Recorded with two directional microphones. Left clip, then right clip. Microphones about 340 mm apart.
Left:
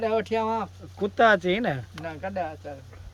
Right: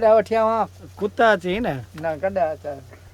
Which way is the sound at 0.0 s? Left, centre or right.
Centre.